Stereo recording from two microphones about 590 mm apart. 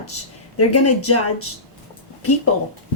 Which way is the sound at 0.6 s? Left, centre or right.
Left.